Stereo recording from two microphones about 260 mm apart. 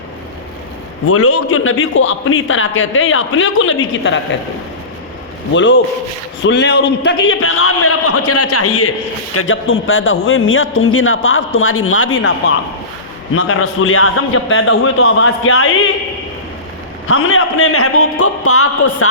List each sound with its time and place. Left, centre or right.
1.0 s a man's voice: left
5.5 s a man's voice: left
13.3 s a man's voice: left
17.1 s a man's voice: left